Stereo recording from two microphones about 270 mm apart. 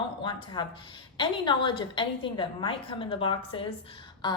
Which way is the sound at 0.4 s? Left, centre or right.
Centre.